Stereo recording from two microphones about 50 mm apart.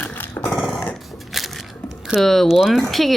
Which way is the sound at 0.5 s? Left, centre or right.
Centre.